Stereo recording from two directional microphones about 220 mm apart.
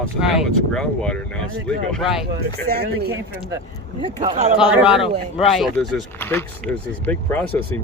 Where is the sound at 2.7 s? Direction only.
45° right (ahead or behind).